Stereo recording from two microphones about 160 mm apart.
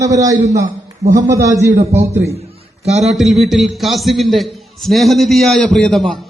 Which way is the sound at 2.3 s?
40° right (ahead or behind).